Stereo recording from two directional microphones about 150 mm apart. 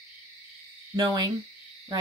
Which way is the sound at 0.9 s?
30° right (ahead or behind).